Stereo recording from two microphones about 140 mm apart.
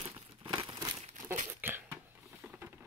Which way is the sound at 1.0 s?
55° right (ahead or behind).